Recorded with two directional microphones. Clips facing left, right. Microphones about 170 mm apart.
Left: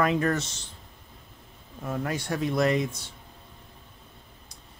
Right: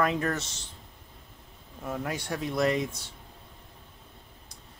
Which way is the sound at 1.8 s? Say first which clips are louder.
Left 3 dB; 5° right (ahead or behind).